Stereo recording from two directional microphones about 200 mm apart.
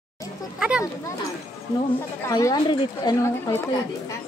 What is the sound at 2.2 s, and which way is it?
Speech, 20° left (ahead or behind).